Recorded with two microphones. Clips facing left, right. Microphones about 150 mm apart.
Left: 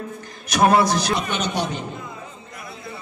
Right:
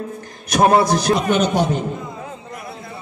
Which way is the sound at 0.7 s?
45° right (ahead or behind).